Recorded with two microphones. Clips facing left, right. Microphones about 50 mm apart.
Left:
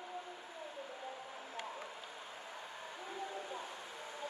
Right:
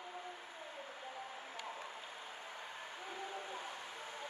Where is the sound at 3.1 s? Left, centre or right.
Right.